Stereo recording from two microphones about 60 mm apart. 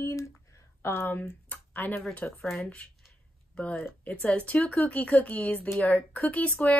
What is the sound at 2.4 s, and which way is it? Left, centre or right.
Speech, centre.